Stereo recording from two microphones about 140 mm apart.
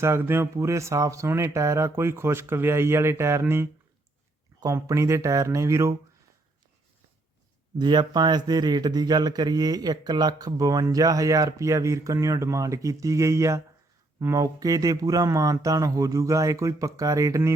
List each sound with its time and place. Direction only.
0.0 s speech: 15° right (ahead or behind)
7.8 s speech: 30° right (ahead or behind)